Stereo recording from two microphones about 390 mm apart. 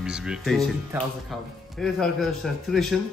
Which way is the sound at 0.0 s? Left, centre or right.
Centre.